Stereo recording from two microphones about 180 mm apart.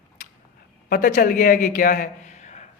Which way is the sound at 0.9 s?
45° left (ahead or behind).